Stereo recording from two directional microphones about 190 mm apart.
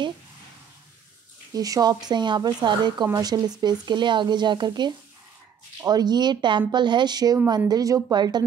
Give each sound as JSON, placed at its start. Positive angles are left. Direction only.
{"t": 1.5, "sound": "a woman's voice", "side_deg": -20}